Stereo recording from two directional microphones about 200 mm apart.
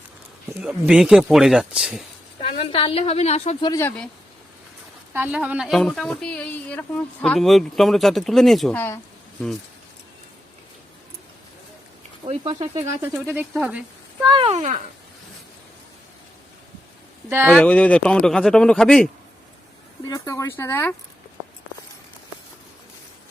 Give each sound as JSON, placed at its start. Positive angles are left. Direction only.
{"t": 0.6, "sound": "a woman's voice", "side_deg": -5}
{"t": 2.4, "sound": "a woman's voice", "side_deg": 25}
{"t": 3.7, "sound": "speech", "side_deg": 10}
{"t": 5.1, "sound": "a woman's voice", "side_deg": -5}
{"t": 12.2, "sound": "speech", "side_deg": -25}
{"t": 12.8, "sound": "a woman's voice", "side_deg": -15}
{"t": 14.2, "sound": "speech", "side_deg": -25}
{"t": 17.2, "sound": "speech", "side_deg": -10}
{"t": 17.6, "sound": "a woman's voice", "side_deg": 5}
{"t": 20.1, "sound": "speech", "side_deg": 15}